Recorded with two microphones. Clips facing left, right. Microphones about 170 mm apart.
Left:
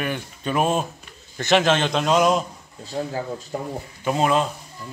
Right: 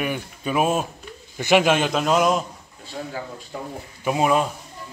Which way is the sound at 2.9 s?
35° left (ahead or behind).